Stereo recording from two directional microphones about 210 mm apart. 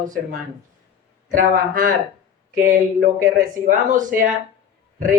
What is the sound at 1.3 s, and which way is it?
Speech, 40° right (ahead or behind).